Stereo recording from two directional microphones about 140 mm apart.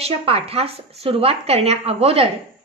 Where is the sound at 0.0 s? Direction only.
45° right (ahead or behind).